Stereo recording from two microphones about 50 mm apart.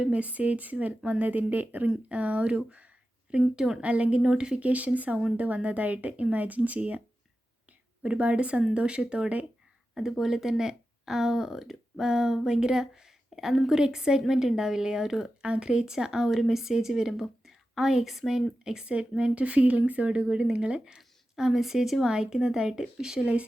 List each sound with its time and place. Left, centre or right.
0.0 s speech: right
3.4 s speech: centre
3.8 s speech: right
4.2 s speech: centre; by 7.0 s right
8.0 s speech: right
9.9 s speech: centre
15.4 s speech: right